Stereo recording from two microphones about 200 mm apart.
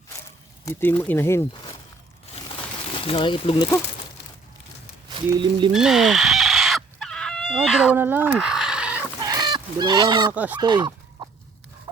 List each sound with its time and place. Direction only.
0.6 s speech: 10° left (ahead or behind)
2.3 s a sound: 30° left (ahead or behind)
5.3 s speech: 25° right (ahead or behind)
5.7 s chicken: centre (ahead or behind)
9.2 s fowl: 20° right (ahead or behind)
10.3 s speech: 10° right (ahead or behind)
10.6 s chicken: 25° right (ahead or behind)